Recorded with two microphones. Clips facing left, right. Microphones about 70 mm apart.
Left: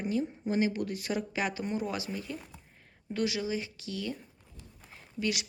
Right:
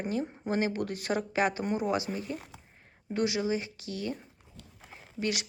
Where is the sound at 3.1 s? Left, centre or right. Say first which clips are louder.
Right 3 dB; right.